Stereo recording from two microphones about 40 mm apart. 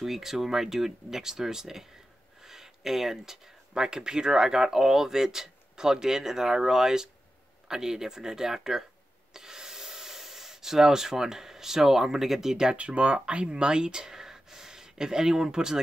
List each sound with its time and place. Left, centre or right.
0.0 s speech: centre
2.4 s a sound: centre
3.7 s speech: centre
12.7 s speech: right; by 15.8 s centre